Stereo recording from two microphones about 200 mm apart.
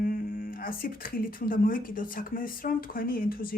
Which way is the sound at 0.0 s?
45° left (ahead or behind).